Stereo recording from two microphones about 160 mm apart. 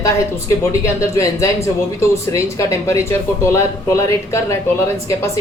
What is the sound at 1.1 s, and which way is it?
Speech, 20° left (ahead or behind).